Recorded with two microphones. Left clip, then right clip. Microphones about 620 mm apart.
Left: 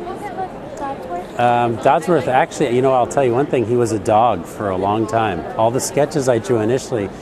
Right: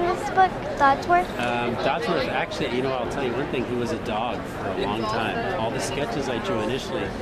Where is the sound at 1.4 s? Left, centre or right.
Left.